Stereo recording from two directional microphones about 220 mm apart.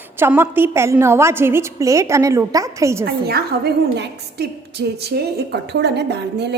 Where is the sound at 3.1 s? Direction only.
45° right (ahead or behind).